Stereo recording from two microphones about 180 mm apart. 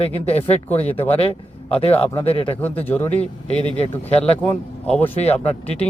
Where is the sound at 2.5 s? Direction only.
10° left (ahead or behind).